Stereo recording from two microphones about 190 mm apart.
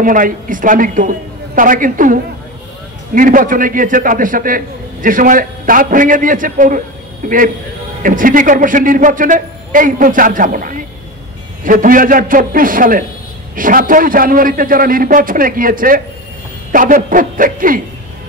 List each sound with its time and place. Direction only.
0.0 s a man's voice: 45° right (ahead or behind)
3.2 s a man's voice: 45° right (ahead or behind)